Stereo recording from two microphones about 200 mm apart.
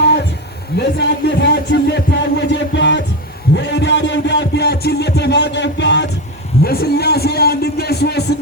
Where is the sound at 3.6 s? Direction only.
60° left (ahead or behind).